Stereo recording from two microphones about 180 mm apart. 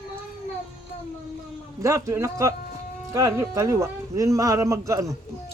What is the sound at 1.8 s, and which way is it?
Speech, 15° right (ahead or behind).